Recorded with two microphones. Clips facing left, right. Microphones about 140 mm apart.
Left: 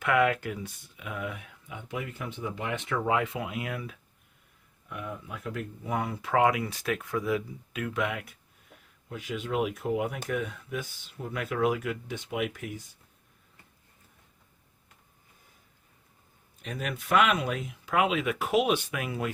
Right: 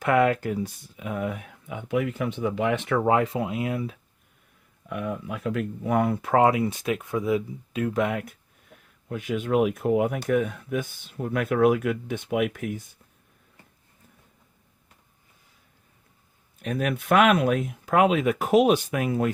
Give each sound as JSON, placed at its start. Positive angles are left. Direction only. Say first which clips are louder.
{"t": 0.0, "sound": "speech", "louder": "right 4 dB", "side_deg": -35}
{"t": 4.9, "sound": "speech", "louder": "right 8 dB", "side_deg": -85}
{"t": 6.3, "sound": "speech", "louder": "right 4 dB", "side_deg": -30}
{"t": 16.6, "sound": "speech", "louder": "right 8 dB", "side_deg": -55}